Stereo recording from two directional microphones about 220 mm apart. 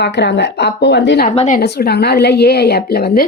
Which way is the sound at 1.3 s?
30° left (ahead or behind).